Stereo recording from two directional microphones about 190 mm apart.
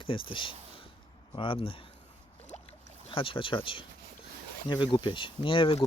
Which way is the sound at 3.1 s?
30° left (ahead or behind).